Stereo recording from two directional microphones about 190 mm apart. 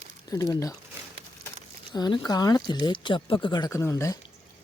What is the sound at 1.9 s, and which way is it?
Speech, 20° left (ahead or behind).